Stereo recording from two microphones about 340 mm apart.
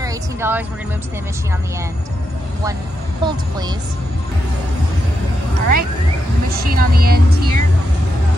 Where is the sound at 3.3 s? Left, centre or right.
Centre.